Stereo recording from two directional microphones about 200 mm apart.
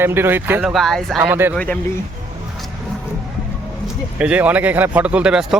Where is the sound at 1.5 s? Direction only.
5° left (ahead or behind).